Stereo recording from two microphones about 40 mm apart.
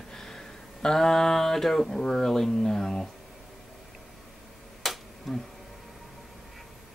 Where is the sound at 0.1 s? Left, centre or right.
Centre.